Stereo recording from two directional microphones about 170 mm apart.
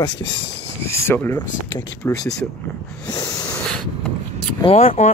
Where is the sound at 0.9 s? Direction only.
15° left (ahead or behind).